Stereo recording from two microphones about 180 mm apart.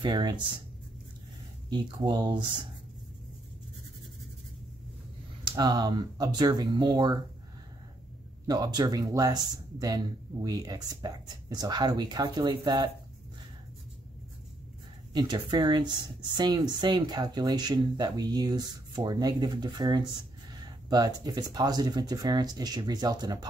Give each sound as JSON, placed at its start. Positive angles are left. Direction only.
{"t": 0.0, "sound": "speech", "side_deg": -25}
{"t": 1.7, "sound": "speech", "side_deg": -20}
{"t": 5.4, "sound": "speech", "side_deg": -20}
{"t": 8.5, "sound": "speech", "side_deg": -20}
{"t": 15.1, "sound": "speech", "side_deg": -25}